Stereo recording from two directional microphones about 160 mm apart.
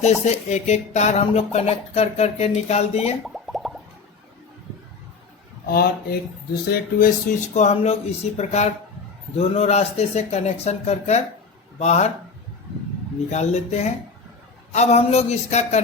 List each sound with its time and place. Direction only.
0.0 s speech: 45° left (ahead or behind)
3.2 s plop: centre (ahead or behind)
5.6 s speech: 70° left (ahead or behind)
6.7 s speech: 60° left (ahead or behind)
7.5 s speech: 45° left (ahead or behind)
13.3 s speech: 45° left (ahead or behind)